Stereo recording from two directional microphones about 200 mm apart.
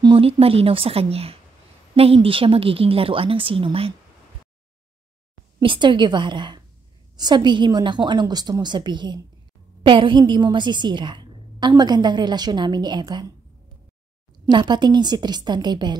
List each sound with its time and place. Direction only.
0.0 s a woman's voice: 25° right (ahead or behind)
5.6 s a woman's voice: 25° right (ahead or behind)
14.5 s a woman's voice: 20° right (ahead or behind)